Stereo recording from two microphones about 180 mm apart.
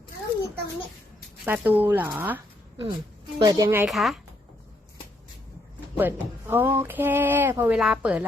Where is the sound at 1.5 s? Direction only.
10° right (ahead or behind).